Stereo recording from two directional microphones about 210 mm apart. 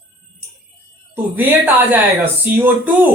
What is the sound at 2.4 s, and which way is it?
Speech, 10° right (ahead or behind).